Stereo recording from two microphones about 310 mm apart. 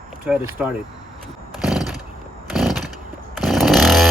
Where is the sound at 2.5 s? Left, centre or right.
Centre.